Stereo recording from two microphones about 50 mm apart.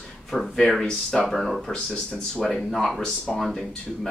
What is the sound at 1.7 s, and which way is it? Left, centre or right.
Speech, centre.